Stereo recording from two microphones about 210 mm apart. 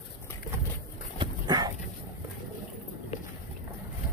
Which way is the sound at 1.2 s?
20° right (ahead or behind).